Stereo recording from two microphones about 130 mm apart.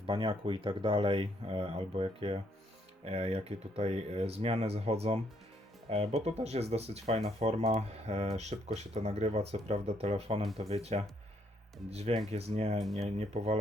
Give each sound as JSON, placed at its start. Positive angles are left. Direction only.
{"t": 0.0, "sound": "speech", "side_deg": -40}
{"t": 12.8, "sound": "speech", "side_deg": 0}
{"t": 13.1, "sound": "speech", "side_deg": -50}